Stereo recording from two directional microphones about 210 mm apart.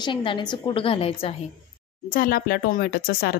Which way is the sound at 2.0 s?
45° left (ahead or behind).